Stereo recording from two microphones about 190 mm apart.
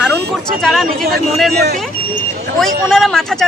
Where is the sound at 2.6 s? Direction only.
Centre (ahead or behind).